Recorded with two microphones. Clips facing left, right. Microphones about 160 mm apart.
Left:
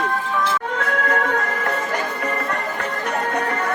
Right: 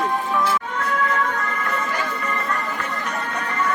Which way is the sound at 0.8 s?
60° left (ahead or behind).